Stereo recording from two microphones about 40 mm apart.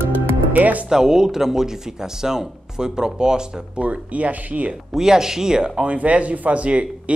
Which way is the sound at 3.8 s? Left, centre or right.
Right.